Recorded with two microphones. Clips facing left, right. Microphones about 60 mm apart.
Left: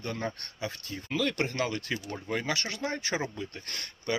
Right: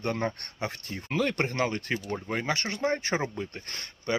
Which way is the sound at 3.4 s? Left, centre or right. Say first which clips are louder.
Right 2 dB; right.